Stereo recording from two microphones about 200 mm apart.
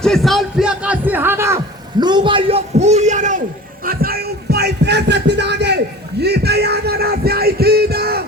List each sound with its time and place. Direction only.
0.0 s music: centre (ahead or behind)
2.0 s a man's voice: 20° right (ahead or behind); by 3.4 s 40° right (ahead or behind)
3.8 s music: 50° right (ahead or behind)